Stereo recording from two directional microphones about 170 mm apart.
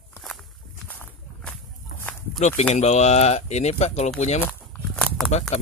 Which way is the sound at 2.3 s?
45° left (ahead or behind).